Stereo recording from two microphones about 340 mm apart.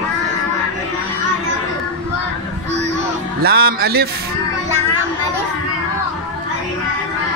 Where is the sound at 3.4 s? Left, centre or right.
Right.